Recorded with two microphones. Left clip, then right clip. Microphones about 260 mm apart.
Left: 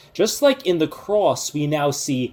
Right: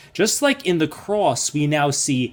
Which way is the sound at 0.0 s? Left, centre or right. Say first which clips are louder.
Left 2 dB; right.